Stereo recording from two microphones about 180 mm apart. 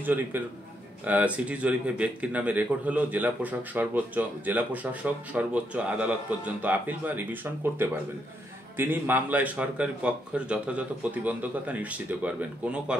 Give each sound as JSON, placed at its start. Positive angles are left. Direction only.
{"t": 0.0, "sound": "speech", "side_deg": -10}
{"t": 8.7, "sound": "speech", "side_deg": -10}